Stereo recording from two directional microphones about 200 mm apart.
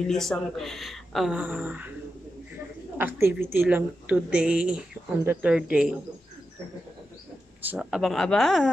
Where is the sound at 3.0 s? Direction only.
10° right (ahead or behind).